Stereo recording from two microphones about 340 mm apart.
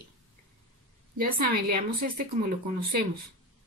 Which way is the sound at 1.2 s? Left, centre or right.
Right.